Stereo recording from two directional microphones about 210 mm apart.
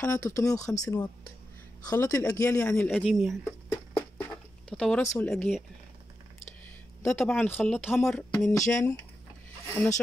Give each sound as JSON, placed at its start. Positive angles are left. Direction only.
{"t": 0.0, "sound": "speech", "side_deg": 10}
{"t": 3.7, "sound": "a sound", "side_deg": 10}
{"t": 5.2, "sound": "speech", "side_deg": 5}
{"t": 7.0, "sound": "speech", "side_deg": 5}